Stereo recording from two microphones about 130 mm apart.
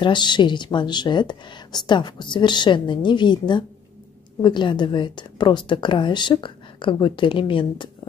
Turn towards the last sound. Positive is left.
turn(degrees=40)  # may be behind; listen again after turning